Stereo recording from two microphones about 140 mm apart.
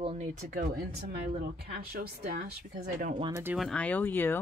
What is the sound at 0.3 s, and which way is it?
Speech, 65° right (ahead or behind).